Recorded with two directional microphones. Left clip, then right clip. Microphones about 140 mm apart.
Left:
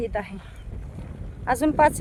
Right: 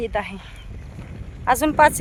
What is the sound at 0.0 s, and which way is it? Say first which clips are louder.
Speech: right 4 dB; 30° right (ahead or behind).